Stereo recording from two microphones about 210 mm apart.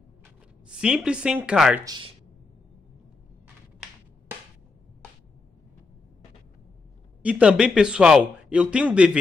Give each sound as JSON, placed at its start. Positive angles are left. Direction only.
{"t": 0.7, "sound": "a man's voice", "side_deg": -5}
{"t": 1.9, "sound": "speech", "side_deg": -25}
{"t": 7.2, "sound": "a man's voice", "side_deg": -5}